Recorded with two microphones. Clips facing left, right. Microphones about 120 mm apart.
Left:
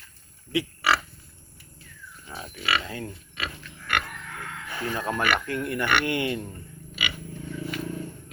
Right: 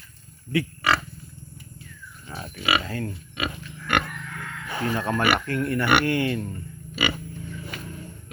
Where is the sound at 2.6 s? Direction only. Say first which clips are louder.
Right 3 dB; 10° right (ahead or behind).